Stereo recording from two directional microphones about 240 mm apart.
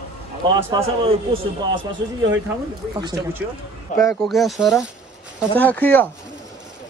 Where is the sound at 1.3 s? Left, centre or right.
Right.